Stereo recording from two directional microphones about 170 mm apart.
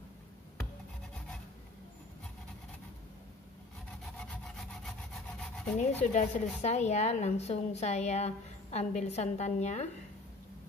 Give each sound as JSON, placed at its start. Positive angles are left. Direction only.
{"t": 4.0, "sound": "rub", "side_deg": 0}
{"t": 5.8, "sound": "a woman's voice", "side_deg": 40}